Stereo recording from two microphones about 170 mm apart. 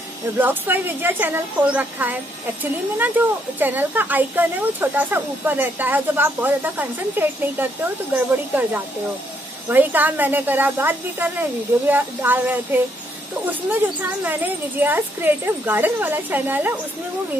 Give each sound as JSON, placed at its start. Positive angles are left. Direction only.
{"t": 0.4, "sound": "speech", "side_deg": -10}
{"t": 14.2, "sound": "speech", "side_deg": -10}